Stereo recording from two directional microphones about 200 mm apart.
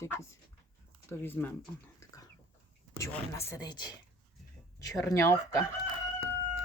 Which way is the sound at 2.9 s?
15° left (ahead or behind).